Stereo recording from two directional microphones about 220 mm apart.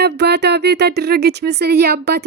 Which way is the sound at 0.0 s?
50° right (ahead or behind).